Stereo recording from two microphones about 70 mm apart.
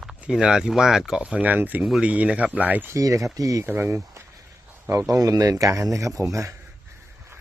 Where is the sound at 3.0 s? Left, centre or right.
Right.